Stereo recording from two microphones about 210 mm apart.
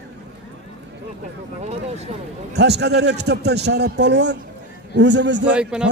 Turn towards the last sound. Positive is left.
turn(degrees=-5)  # may be behind; listen again after turning